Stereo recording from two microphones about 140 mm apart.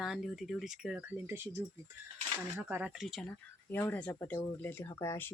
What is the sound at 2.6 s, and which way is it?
Speech, 10° right (ahead or behind).